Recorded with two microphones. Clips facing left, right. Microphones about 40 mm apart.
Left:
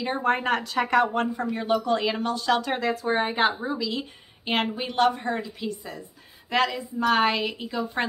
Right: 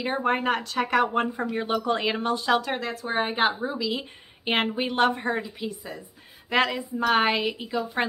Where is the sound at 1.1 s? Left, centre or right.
Centre.